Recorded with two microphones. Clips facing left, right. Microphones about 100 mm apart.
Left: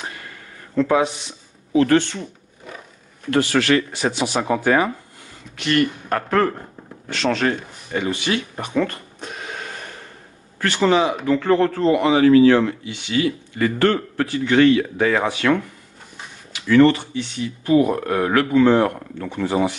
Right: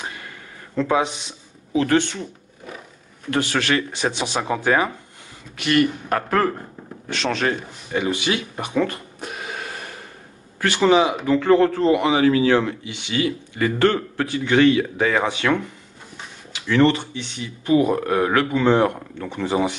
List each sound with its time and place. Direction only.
0.8 s speech: 20° right (ahead or behind)
3.3 s speech: 20° right (ahead or behind)
5.6 s a man's voice: 5° right (ahead or behind)
7.1 s a man's voice: 20° right (ahead or behind)
16.8 s speech: 20° right (ahead or behind)